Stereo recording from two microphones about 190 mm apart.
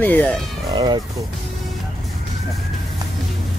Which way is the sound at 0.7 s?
25° right (ahead or behind).